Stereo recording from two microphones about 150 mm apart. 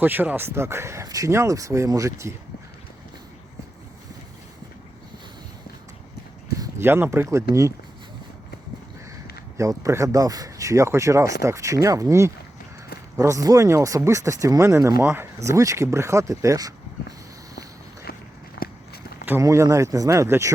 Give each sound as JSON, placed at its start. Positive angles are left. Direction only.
{"t": 0.0, "sound": "speech", "side_deg": -10}
{"t": 6.6, "sound": "speech", "side_deg": -15}
{"t": 9.6, "sound": "speech", "side_deg": -20}
{"t": 18.6, "sound": "walk", "side_deg": 90}
{"t": 19.2, "sound": "speech", "side_deg": -15}